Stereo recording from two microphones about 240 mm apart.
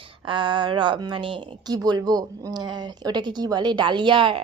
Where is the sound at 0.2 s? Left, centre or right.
Centre.